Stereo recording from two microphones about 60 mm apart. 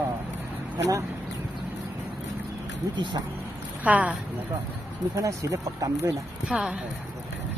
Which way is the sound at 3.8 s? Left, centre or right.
Right.